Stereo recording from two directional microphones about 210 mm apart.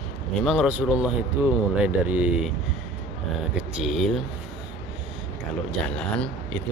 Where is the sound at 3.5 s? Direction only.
Centre (ahead or behind).